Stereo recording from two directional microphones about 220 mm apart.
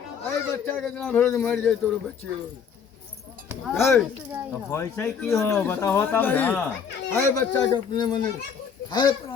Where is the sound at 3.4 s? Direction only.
Centre (ahead or behind).